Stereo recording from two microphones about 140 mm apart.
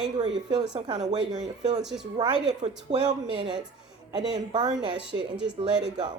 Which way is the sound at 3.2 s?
40° right (ahead or behind).